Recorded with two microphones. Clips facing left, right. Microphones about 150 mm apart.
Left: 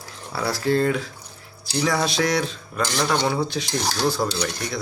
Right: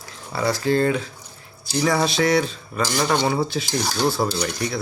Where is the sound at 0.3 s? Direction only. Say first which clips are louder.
Right 1 dB; centre (ahead or behind).